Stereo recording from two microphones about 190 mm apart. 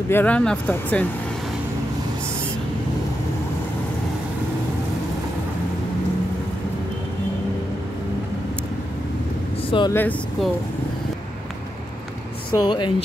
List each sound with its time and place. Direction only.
0.1 s speech: 10° left (ahead or behind)
9.7 s speech: 25° left (ahead or behind)
9.9 s speech: 10° left (ahead or behind)
12.4 s speech: 25° left (ahead or behind)